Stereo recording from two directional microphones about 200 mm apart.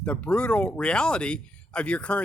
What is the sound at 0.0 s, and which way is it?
Speech, 5° left (ahead or behind).